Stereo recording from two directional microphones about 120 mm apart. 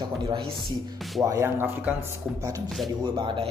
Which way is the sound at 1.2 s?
25° right (ahead or behind).